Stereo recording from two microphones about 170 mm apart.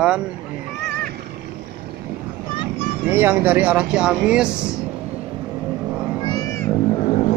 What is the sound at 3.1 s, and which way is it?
Speech, 10° right (ahead or behind).